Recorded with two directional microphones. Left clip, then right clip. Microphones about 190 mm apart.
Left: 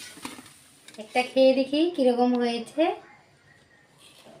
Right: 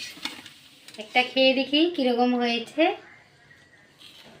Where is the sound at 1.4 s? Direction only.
5° left (ahead or behind).